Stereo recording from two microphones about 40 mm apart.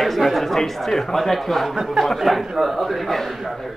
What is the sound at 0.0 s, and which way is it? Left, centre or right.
A man's voice, centre.